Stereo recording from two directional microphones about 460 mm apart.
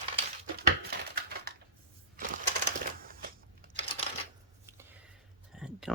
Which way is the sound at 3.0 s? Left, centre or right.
Centre.